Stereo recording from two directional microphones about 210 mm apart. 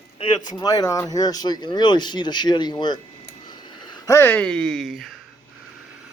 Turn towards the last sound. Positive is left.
turn(degrees=0)  # may be behind; listen again after turning